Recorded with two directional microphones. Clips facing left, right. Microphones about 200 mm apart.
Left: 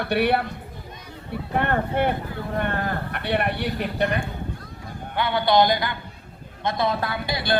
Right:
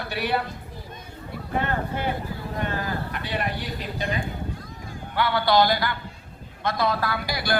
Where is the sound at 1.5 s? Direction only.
60° left (ahead or behind).